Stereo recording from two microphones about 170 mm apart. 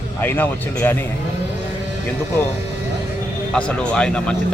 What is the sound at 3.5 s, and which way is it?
Speech, 5° left (ahead or behind).